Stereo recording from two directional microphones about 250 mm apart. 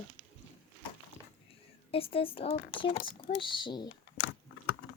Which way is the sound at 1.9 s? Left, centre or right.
Left.